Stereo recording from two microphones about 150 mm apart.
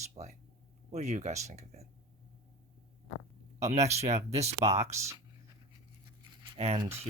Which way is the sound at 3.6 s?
50° right (ahead or behind).